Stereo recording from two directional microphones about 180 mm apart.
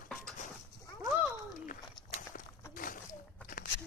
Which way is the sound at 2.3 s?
50° left (ahead or behind).